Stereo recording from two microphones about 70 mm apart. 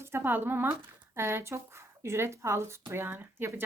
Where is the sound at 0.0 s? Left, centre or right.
Right.